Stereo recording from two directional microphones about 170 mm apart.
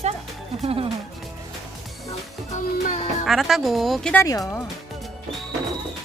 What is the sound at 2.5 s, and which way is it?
Music, 45° left (ahead or behind).